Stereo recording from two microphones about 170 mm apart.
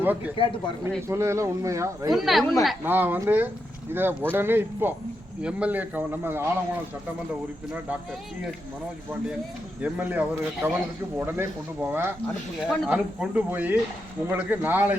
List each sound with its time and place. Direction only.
0.4 s speech: 30° left (ahead or behind)
1.0 s speech: 15° right (ahead or behind)
2.1 s speech: centre (ahead or behind)
2.8 s speech: 10° right (ahead or behind)
9.8 s speech: 10° right (ahead or behind)